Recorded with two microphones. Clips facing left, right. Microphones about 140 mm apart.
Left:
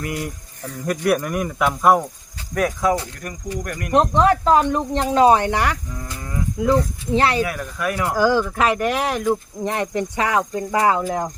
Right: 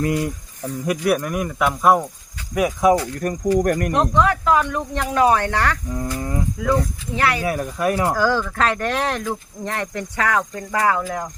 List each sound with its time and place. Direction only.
0.0 s speech: 25° right (ahead or behind)
1.0 s speech: centre (ahead or behind)
2.6 s speech: 10° right (ahead or behind)
3.2 s speech: 40° right (ahead or behind)
3.9 s speech: 30° left (ahead or behind); by 5.8 s 15° left (ahead or behind)
5.9 s speech: 25° right (ahead or behind)
6.6 s speech: 25° left (ahead or behind)
7.4 s speech: 30° right (ahead or behind)
8.1 s speech: 15° left (ahead or behind)
9.2 s speech: 15° left (ahead or behind)